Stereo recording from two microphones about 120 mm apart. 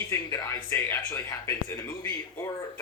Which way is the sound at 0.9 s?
25° left (ahead or behind).